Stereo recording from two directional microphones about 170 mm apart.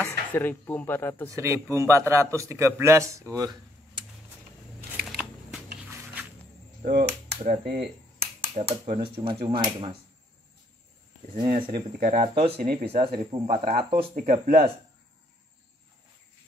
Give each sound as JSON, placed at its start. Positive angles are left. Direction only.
{"t": 0.3, "sound": "speech", "side_deg": 10}
{"t": 1.3, "sound": "a man's voice", "side_deg": -15}
{"t": 5.0, "sound": "scissors", "side_deg": 0}
{"t": 6.9, "sound": "cap gun", "side_deg": -65}
{"t": 7.4, "sound": "speech", "side_deg": -60}
{"t": 8.4, "sound": "speech", "side_deg": -35}
{"t": 11.3, "sound": "speech", "side_deg": -25}
{"t": 12.0, "sound": "speech", "side_deg": -40}
{"t": 14.1, "sound": "speech", "side_deg": -55}